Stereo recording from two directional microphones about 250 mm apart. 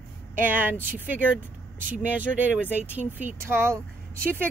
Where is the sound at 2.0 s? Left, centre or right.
Centre.